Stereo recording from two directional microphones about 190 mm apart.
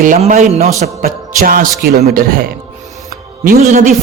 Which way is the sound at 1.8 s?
55° right (ahead or behind).